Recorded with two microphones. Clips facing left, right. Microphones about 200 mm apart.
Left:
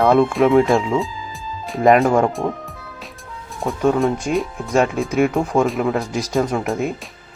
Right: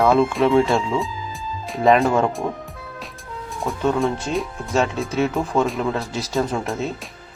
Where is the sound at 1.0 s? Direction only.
Centre (ahead or behind).